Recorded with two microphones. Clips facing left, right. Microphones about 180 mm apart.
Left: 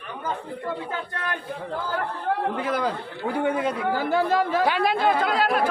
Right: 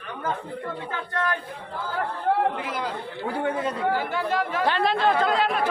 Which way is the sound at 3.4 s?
15° left (ahead or behind).